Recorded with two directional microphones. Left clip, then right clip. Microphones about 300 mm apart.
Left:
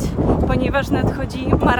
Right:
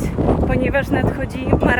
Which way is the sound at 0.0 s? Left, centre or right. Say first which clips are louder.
Right 1 dB; centre.